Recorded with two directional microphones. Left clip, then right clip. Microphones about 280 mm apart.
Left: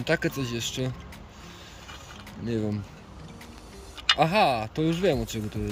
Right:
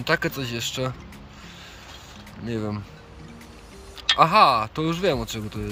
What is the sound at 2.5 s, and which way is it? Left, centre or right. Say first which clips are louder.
Speech: even; centre.